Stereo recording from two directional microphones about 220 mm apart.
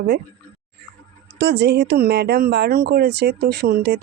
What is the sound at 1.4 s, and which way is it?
Speech, 50° right (ahead or behind).